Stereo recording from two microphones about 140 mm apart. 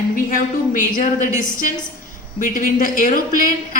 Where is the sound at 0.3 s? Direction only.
80° left.